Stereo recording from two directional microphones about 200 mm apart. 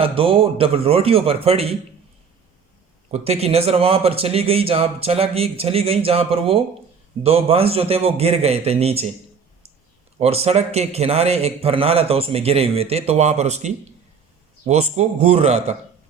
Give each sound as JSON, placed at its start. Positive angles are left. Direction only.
{"t": 0.0, "sound": "a man's voice", "side_deg": -25}
{"t": 3.1, "sound": "a man's voice", "side_deg": -30}
{"t": 10.2, "sound": "a man's voice", "side_deg": -30}